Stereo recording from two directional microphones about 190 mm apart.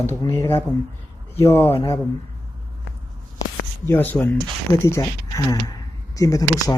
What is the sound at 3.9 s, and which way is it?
Speech, 10° left (ahead or behind).